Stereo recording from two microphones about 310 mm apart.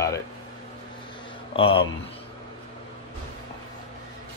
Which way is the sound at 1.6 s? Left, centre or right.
Centre.